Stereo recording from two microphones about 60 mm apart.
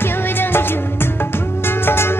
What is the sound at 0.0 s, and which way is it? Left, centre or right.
Music, left.